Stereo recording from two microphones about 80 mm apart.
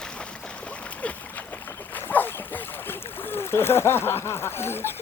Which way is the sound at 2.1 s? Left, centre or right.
Left.